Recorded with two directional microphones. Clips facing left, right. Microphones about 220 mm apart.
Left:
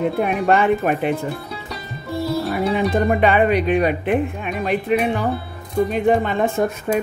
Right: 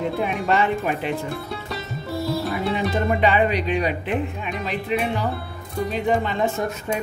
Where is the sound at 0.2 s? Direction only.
55° left (ahead or behind).